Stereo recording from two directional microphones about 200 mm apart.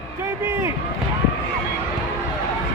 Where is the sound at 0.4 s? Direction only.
10° right (ahead or behind).